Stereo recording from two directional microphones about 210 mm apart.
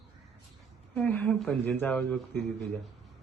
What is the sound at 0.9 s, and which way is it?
Speech, 5° left (ahead or behind).